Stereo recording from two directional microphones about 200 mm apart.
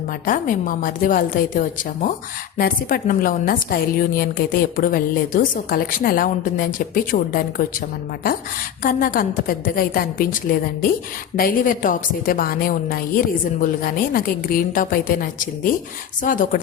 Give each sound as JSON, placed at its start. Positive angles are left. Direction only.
{"t": 0.3, "sound": "a woman's voice", "side_deg": 40}
{"t": 8.8, "sound": "a woman's voice", "side_deg": 45}